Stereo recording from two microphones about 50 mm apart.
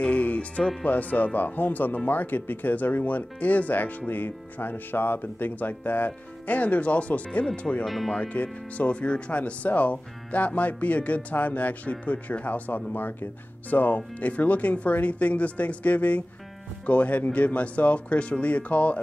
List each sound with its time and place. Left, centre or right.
0.0 s music: left
0.8 s speech: left
7.8 s speech: centre
8.1 s speech: left